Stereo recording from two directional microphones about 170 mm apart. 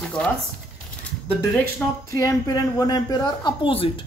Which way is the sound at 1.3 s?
10° left (ahead or behind).